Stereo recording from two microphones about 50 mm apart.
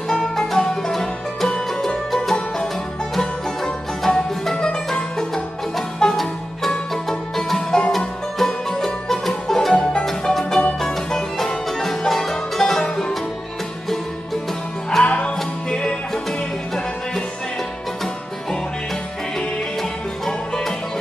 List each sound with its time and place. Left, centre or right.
0.1 s music: centre
3.2 s music: centre
4.6 s music: centre
5.3 s music: centre
15.0 s music: left
16.3 s music: centre
19.8 s music: centre